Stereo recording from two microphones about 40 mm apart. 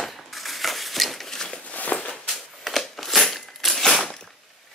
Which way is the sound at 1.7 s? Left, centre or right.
Left.